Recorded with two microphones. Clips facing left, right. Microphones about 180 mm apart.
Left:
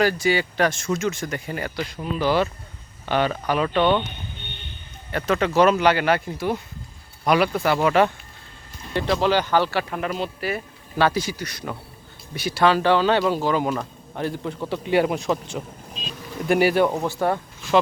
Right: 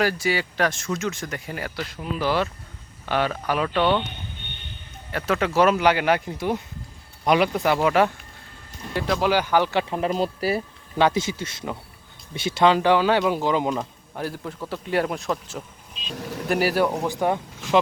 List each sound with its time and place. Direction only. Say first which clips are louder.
0.0 s speech: left 3 dB; 5° right (ahead or behind)
3.8 s speech: left 2 dB; 15° left (ahead or behind)
5.1 s speech: left 2 dB; 5° right (ahead or behind)
9.9 s speech: right 3 dB; 35° right (ahead or behind)
10.9 s a man's voice: even; 20° right (ahead or behind)
14.2 s speech: left 3 dB; 5° right (ahead or behind)
16.1 s vehicle: right 9 dB; 75° right (ahead or behind)
16.5 s speech: left 3 dB; centre (ahead or behind)
17.0 s speech: even; 15° right (ahead or behind)